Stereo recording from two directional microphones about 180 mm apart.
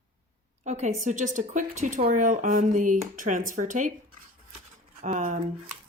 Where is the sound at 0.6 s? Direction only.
40° right (ahead or behind).